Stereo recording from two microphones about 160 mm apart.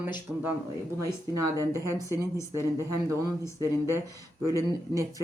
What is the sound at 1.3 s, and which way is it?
Speech, 20° right (ahead or behind).